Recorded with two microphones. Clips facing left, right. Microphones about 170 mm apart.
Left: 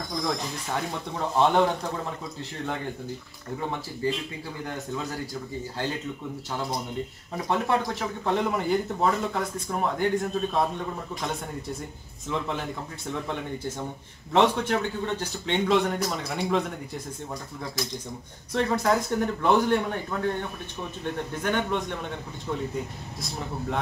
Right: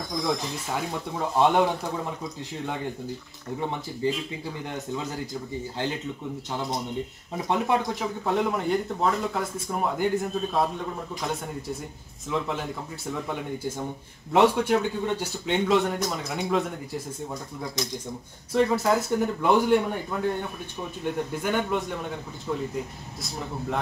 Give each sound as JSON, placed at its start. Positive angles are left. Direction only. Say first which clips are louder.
{"t": 0.1, "sound": "speech", "louder": "right 2 dB", "side_deg": -5}
{"t": 4.9, "sound": "speech", "louder": "even", "side_deg": -20}
{"t": 7.3, "sound": "speech", "louder": "right 1 dB", "side_deg": -20}
{"t": 8.0, "sound": "speech", "louder": "right 1 dB", "side_deg": 0}
{"t": 18.5, "sound": "speech", "louder": "right 2 dB", "side_deg": -5}